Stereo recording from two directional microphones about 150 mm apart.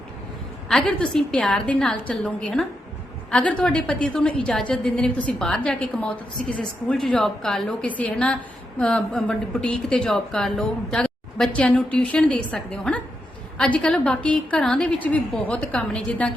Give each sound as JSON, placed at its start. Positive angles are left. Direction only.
{"t": 0.7, "sound": "a woman's voice", "side_deg": 5}